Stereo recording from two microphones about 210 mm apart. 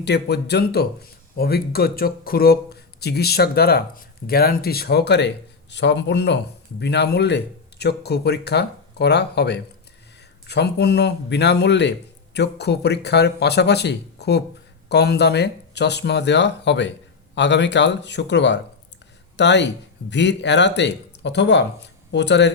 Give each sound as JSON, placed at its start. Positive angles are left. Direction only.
{"t": 0.0, "sound": "speech", "side_deg": 50}